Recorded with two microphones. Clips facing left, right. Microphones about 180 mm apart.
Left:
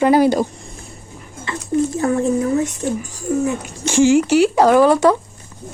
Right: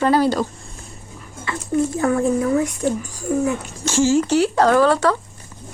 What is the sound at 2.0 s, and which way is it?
Speech, 30° left (ahead or behind).